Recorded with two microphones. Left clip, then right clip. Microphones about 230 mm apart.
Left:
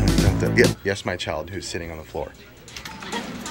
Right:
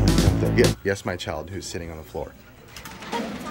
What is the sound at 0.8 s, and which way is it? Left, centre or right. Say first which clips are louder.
Speech: left 1 dB; centre.